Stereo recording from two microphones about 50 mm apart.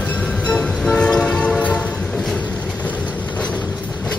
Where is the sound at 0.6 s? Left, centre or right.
Centre.